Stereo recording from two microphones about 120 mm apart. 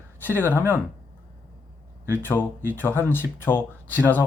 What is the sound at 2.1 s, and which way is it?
Speech, 15° left (ahead or behind).